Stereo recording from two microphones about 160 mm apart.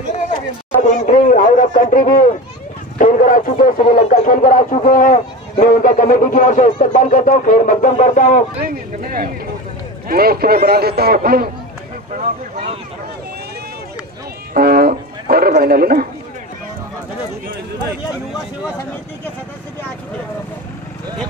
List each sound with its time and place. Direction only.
0.8 s a man's voice: 50° left (ahead or behind)
8.6 s speech: 65° right (ahead or behind)
14.5 s speech: 70° right (ahead or behind)